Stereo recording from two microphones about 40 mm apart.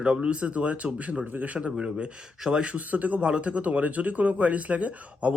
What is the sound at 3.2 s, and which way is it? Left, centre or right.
Speech, right.